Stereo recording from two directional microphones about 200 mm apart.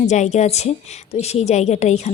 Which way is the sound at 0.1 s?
35° left (ahead or behind).